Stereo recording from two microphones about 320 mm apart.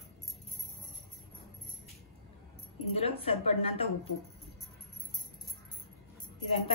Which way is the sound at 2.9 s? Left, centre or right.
Centre.